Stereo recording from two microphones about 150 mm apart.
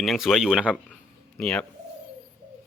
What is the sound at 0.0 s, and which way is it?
Speech, centre (ahead or behind).